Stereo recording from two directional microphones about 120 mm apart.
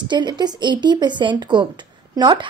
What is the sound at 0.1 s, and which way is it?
A woman's voice, 40° right (ahead or behind).